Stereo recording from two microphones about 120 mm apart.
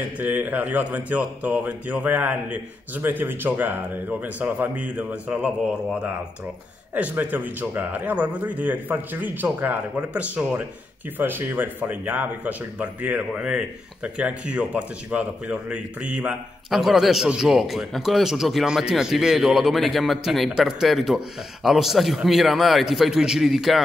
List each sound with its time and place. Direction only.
0.2 s speech: 15° right (ahead or behind)
6.9 s a man's voice: 15° right (ahead or behind)